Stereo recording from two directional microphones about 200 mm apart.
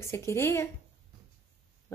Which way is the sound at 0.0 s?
15° left (ahead or behind).